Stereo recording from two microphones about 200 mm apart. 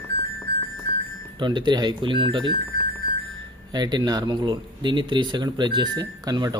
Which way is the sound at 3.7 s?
20° right (ahead or behind).